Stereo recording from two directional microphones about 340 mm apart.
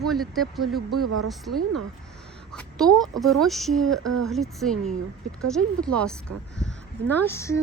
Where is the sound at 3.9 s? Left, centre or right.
Right.